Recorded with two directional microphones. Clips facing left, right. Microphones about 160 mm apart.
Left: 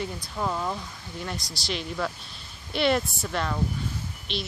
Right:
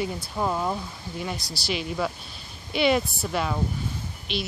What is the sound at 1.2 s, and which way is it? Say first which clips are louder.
Speech: right 2 dB; centre (ahead or behind).